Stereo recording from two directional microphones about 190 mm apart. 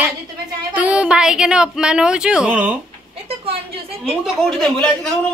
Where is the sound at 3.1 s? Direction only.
30° right (ahead or behind).